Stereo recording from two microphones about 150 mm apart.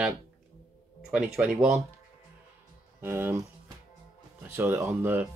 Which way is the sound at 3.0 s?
15° right (ahead or behind).